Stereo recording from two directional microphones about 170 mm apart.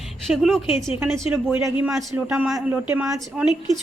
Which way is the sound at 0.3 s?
Centre (ahead or behind).